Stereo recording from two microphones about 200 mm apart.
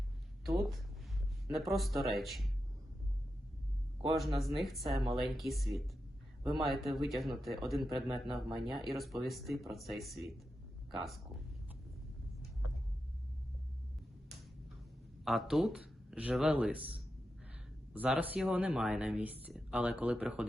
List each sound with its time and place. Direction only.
0.4 s speech: centre (ahead or behind)
4.4 s speech: centre (ahead or behind)
15.2 s a man's voice: centre (ahead or behind)